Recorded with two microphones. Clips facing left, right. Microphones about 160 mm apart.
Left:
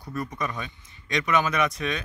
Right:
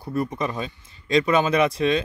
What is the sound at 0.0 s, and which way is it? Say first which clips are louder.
Speech: right 6 dB; 25° right (ahead or behind).